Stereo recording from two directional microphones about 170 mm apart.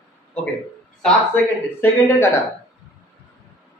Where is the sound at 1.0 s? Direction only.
10° left (ahead or behind).